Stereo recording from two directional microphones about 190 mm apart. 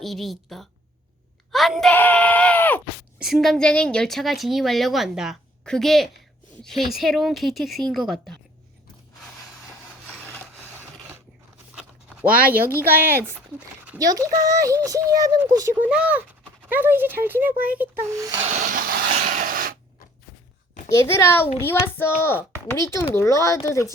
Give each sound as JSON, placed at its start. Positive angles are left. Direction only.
{"t": 0.0, "sound": "a woman's voice", "side_deg": 0}
{"t": 1.5, "sound": "a sound", "side_deg": 0}
{"t": 3.2, "sound": "a woman's voice", "side_deg": 0}
{"t": 12.8, "sound": "a child's voice", "side_deg": -10}
{"t": 15.8, "sound": "speech", "side_deg": -5}
{"t": 18.4, "sound": "a sound", "side_deg": -40}
{"t": 20.9, "sound": "a child's voice", "side_deg": 15}